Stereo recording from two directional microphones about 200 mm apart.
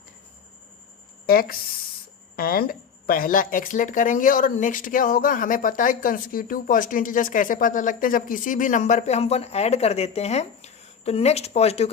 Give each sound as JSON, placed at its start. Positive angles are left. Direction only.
{"t": 1.3, "sound": "speech", "side_deg": 45}